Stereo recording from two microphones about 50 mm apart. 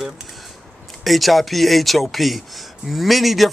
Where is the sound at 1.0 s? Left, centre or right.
Centre.